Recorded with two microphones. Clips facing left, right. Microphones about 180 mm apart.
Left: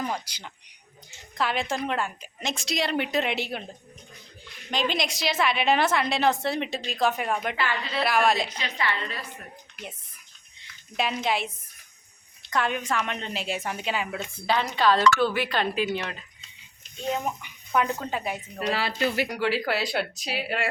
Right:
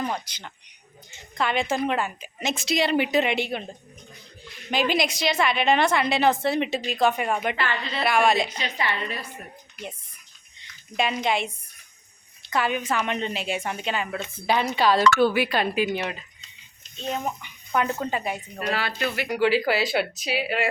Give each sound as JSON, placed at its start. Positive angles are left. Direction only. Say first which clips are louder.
{"t": 0.0, "sound": "a woman's voice", "louder": "right 2 dB", "side_deg": 5}
{"t": 4.7, "sound": "a woman's voice", "louder": "right 4 dB", "side_deg": -5}
{"t": 8.5, "sound": "a woman's voice", "louder": "right 1 dB", "side_deg": -20}
{"t": 10.6, "sound": "a woman's voice", "louder": "right 3 dB", "side_deg": 0}
{"t": 14.4, "sound": "a woman's voice", "louder": "right 1 dB", "side_deg": -15}
{"t": 17.7, "sound": "a woman's voice", "louder": "right 1 dB", "side_deg": 0}
{"t": 18.7, "sound": "speech", "louder": "left 1 dB", "side_deg": 30}
{"t": 19.3, "sound": "a woman's voice", "louder": "right 5 dB", "side_deg": 0}